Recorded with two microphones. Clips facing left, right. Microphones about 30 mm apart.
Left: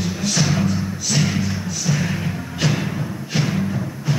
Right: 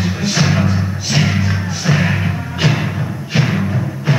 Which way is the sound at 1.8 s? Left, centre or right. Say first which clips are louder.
Right 7 dB; right.